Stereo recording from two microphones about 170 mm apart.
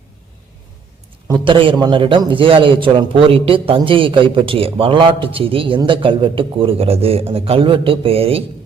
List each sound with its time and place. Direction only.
1.3 s a man's voice: 30° right (ahead or behind)